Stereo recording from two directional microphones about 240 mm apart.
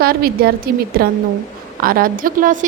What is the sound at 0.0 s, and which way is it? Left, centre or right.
A woman's voice, right.